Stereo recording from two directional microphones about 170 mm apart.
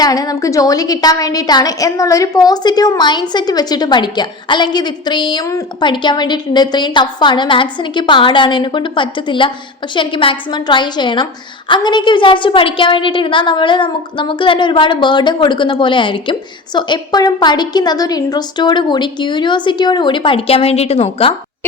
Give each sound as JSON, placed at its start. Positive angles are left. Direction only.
{"t": 0.0, "sound": "a woman's voice", "side_deg": 20}